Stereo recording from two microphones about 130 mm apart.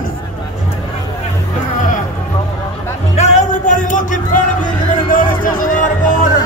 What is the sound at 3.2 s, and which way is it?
Music, 70° left (ahead or behind).